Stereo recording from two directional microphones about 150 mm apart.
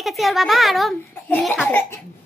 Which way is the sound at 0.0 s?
Centre (ahead or behind).